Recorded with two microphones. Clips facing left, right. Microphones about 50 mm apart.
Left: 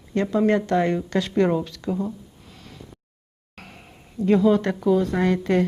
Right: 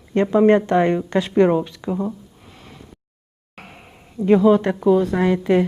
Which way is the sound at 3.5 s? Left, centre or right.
Centre.